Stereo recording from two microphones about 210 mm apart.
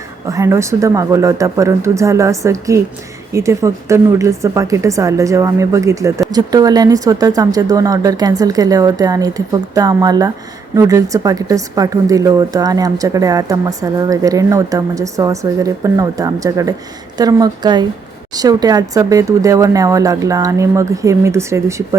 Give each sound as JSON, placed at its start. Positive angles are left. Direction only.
{"t": 0.3, "sound": "a woman's voice", "side_deg": -15}